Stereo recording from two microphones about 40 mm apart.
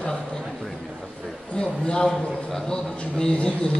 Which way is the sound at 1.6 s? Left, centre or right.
Left.